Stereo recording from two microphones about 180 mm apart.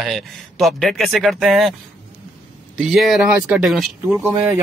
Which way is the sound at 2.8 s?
Centre (ahead or behind).